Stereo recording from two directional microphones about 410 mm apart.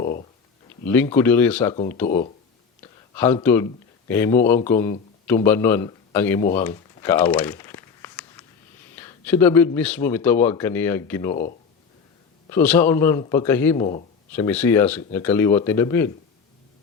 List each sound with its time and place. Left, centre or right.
0.0 s a sound: left
0.9 s a man's voice: centre
2.8 s a sound: centre
4.1 s a man's voice: centre
6.5 s crumpling: centre
9.0 s a man's voice: centre
12.5 s a man's voice: centre